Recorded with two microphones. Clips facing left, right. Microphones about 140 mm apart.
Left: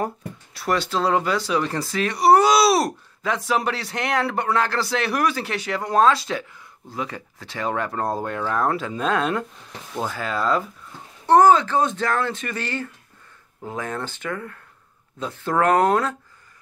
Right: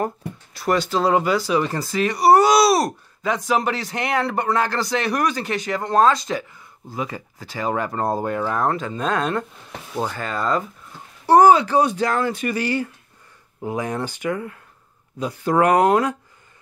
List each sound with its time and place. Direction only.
0.6 s speech: centre (ahead or behind)
8.6 s speech: 5° left (ahead or behind)